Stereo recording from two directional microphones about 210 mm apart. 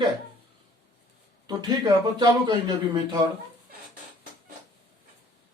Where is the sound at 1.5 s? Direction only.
20° right (ahead or behind).